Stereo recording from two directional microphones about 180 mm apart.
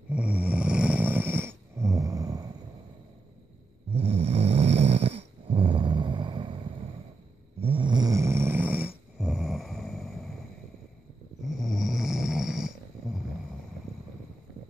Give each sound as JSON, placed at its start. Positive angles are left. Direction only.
{"t": 0.1, "sound": "snoring", "side_deg": -5}
{"t": 3.9, "sound": "snoring", "side_deg": -35}
{"t": 7.6, "sound": "snoring", "side_deg": -30}
{"t": 11.4, "sound": "snoring", "side_deg": 0}